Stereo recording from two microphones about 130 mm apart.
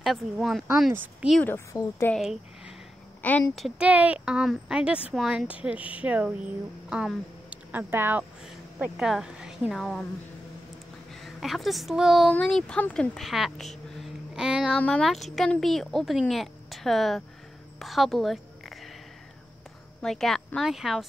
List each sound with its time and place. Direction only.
0.0 s a woman's voice: centre (ahead or behind)
1.4 s speech: 20° left (ahead or behind)
3.2 s speech: 10° left (ahead or behind)
3.5 s a woman's voice: 5° right (ahead or behind)
11.2 s a woman's voice: centre (ahead or behind)
12.3 s a woman's voice: 5° left (ahead or behind)
13.9 s a sound: 5° right (ahead or behind)
14.8 s a woman's voice: 10° left (ahead or behind)
20.0 s a woman's voice: 5° left (ahead or behind)